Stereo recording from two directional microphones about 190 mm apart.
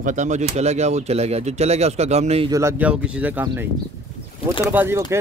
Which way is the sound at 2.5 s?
15° right (ahead or behind).